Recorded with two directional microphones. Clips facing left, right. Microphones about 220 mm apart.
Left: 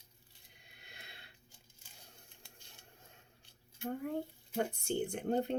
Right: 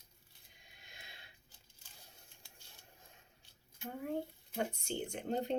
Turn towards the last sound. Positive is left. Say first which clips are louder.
# left 3 dB
turn(degrees=55)  # may be behind; listen again after turning